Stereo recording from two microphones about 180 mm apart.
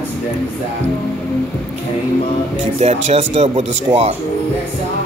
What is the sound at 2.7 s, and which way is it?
Speech, 35° right (ahead or behind).